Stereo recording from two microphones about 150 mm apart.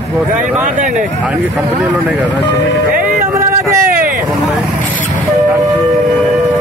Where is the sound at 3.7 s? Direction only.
70° right (ahead or behind).